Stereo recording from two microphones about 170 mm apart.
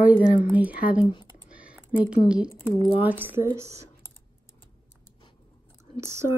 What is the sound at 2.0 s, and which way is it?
Speech, 5° right (ahead or behind).